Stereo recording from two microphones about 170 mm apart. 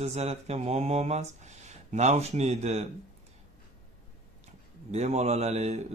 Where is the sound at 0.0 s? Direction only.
40° right (ahead or behind).